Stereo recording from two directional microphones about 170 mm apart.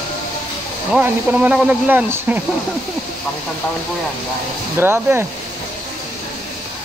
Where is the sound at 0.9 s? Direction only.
10° right (ahead or behind).